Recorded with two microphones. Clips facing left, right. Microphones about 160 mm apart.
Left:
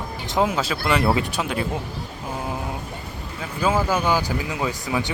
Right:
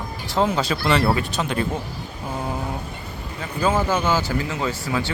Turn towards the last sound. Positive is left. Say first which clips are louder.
# even
turn(degrees=15)  # may be behind; listen again after turning